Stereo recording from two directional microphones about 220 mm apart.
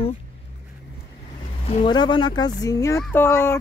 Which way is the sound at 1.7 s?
25° left (ahead or behind).